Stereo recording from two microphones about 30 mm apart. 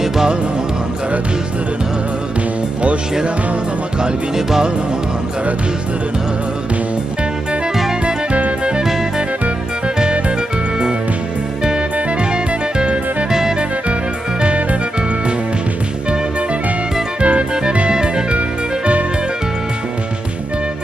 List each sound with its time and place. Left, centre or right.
8.8 s music: centre
9.8 s music: right
12.3 s music: right
14.4 s music: right
17.2 s music: right
17.8 s music: right